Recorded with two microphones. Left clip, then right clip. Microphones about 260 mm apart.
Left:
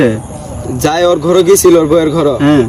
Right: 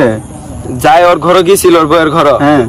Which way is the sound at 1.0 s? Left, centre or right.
Right.